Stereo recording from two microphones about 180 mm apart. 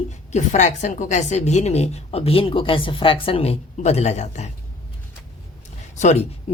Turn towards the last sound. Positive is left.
turn(degrees=35)  # may be behind; listen again after turning